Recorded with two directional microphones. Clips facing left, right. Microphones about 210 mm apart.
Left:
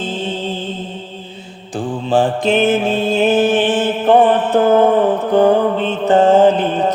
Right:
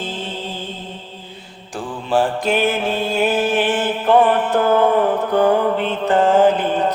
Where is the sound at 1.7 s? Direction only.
25° left (ahead or behind).